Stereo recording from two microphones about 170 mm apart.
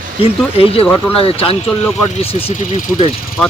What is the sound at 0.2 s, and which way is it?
Speech, 35° left (ahead or behind).